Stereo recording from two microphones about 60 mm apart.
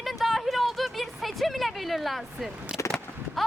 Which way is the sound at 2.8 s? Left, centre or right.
Left.